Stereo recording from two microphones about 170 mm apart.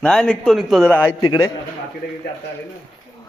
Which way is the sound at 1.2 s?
20° left (ahead or behind).